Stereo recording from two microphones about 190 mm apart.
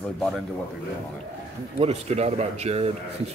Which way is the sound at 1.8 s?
35° right (ahead or behind).